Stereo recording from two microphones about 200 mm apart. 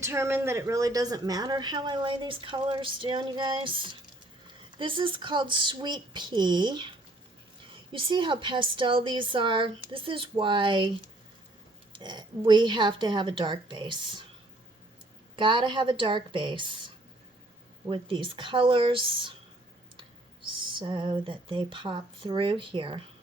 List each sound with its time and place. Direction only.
0.0 s speech: 15° right (ahead or behind)
7.9 s speech: 25° right (ahead or behind)
11.9 s speech: 20° right (ahead or behind)
15.4 s speech: 25° right (ahead or behind)
17.8 s speech: 25° right (ahead or behind)
20.7 s speech: 25° right (ahead or behind)